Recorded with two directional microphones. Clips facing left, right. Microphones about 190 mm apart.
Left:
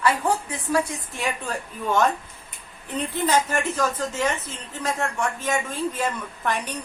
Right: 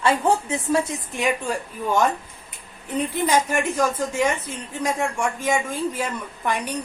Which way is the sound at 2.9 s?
10° right (ahead or behind).